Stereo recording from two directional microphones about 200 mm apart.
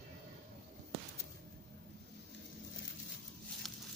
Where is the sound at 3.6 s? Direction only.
Centre (ahead or behind).